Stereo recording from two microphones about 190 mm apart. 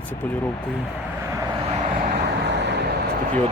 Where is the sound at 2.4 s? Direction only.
65° right (ahead or behind).